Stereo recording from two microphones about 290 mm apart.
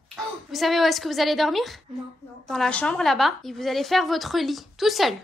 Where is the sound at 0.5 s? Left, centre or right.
Centre.